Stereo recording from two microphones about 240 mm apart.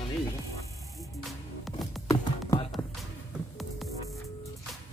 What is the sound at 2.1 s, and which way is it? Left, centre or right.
Music, centre.